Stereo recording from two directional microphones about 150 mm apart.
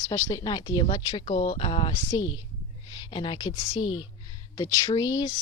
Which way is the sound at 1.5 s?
35° left (ahead or behind).